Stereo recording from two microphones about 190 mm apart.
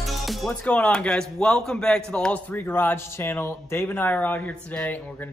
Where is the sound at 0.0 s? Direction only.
Centre (ahead or behind).